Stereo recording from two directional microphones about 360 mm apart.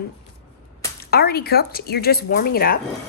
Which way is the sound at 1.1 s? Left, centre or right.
Left.